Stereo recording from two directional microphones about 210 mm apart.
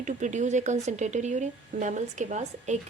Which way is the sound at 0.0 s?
35° right (ahead or behind).